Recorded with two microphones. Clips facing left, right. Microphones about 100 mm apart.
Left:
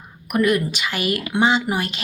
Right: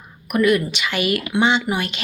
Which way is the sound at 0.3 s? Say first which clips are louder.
Right 1 dB; 40° left (ahead or behind).